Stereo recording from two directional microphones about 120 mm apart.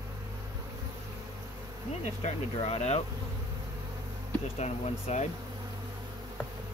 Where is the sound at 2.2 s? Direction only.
55° left (ahead or behind).